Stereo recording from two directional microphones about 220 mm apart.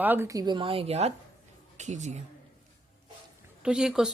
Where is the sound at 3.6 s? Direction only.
5° right (ahead or behind).